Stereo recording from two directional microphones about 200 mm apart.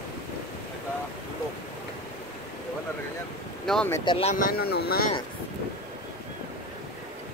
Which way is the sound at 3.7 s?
5° left (ahead or behind).